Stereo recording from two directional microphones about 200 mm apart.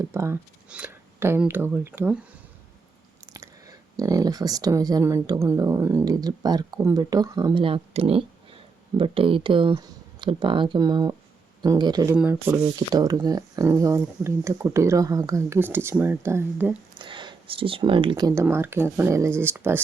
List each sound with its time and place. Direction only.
0.0 s speech: 15° right (ahead or behind)
3.3 s speech: 15° right (ahead or behind)
12.1 s speech: 10° right (ahead or behind)
17.0 s speech: 25° right (ahead or behind)